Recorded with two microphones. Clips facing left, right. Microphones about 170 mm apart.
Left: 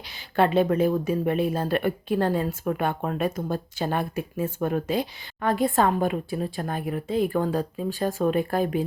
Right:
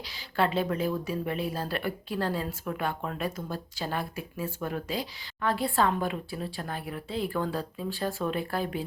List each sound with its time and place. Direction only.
0.0 s a woman's voice: 55° left (ahead or behind)